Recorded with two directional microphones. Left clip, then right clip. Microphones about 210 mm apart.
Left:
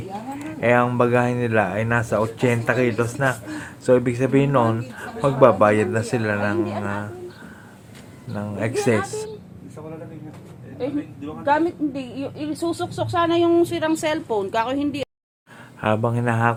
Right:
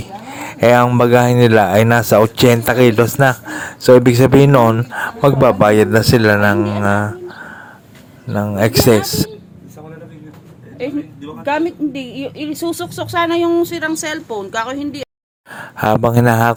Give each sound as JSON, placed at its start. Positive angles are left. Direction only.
{"t": 0.3, "sound": "a sound", "side_deg": -50}
{"t": 0.9, "sound": "speech", "side_deg": -45}
{"t": 11.4, "sound": "a woman's voice", "side_deg": -30}
{"t": 15.5, "sound": "speech", "side_deg": -50}